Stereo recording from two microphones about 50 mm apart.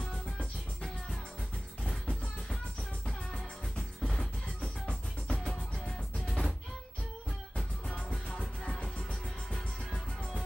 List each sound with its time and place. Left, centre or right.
4.0 s music: centre
4.6 s music: left
5.4 s music: centre
8.1 s music: centre